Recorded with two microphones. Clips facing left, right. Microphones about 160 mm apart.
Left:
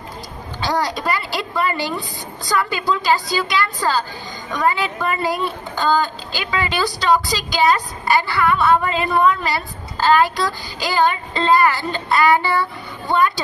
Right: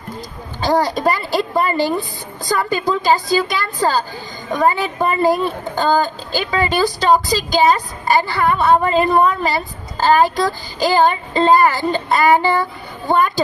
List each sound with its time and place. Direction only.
0.6 s a woman's voice: 45° right (ahead or behind)